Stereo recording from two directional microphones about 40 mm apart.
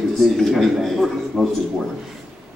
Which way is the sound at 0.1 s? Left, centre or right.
Centre.